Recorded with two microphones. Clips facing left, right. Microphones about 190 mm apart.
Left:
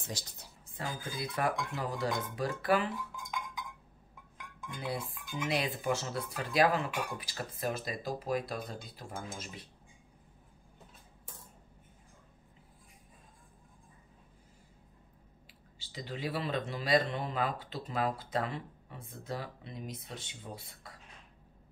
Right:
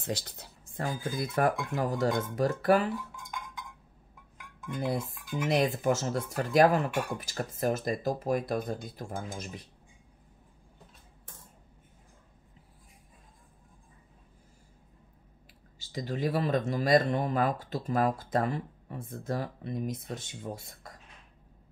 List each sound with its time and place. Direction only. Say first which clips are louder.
0.0 s speech: right 8 dB; 60° right (ahead or behind); by 2.9 s 45° right (ahead or behind)
4.7 s speech: right 6 dB; 45° right (ahead or behind)
15.8 s speech: right 7 dB; 45° right (ahead or behind)